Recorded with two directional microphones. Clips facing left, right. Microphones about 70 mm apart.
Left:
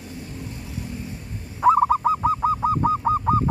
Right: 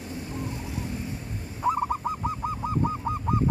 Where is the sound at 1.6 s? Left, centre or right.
Left.